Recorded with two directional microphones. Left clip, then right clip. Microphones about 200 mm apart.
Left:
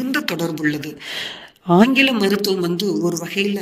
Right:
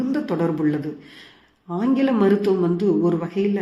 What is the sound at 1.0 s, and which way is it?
Speech, 50° left (ahead or behind).